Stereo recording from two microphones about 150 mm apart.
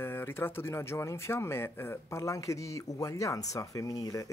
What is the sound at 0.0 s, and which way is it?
Speech, 15° left (ahead or behind).